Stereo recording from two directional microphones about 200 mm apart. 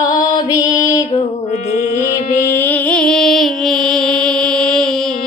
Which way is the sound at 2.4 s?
10° left (ahead or behind).